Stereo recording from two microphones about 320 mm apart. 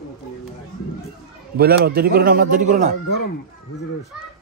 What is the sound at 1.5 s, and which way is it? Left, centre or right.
A man's voice, right.